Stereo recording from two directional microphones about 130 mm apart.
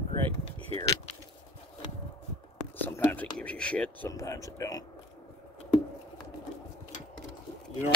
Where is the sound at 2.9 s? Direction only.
15° left (ahead or behind).